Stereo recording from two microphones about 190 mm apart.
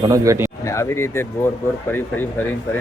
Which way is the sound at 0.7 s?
15° left (ahead or behind).